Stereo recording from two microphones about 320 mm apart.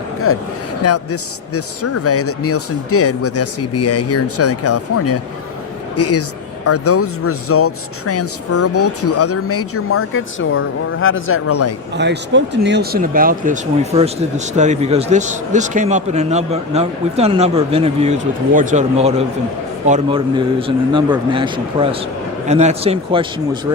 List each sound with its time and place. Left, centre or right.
0.3 s speech: left
11.9 s a man's voice: right